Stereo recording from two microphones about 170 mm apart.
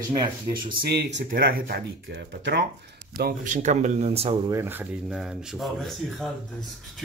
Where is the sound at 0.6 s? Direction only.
60° right (ahead or behind); by 2.6 s 85° right.